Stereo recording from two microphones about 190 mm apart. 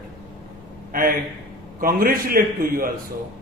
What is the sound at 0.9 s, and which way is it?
A man's voice, 50° right (ahead or behind).